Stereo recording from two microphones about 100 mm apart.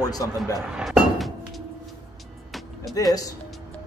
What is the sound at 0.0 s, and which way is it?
Speech, 40° left (ahead or behind).